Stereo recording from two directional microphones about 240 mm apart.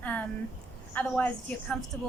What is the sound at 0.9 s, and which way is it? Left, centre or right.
A woman's voice, centre.